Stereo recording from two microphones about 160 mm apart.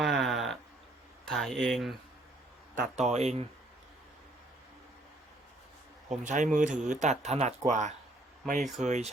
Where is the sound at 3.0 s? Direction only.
45° right (ahead or behind).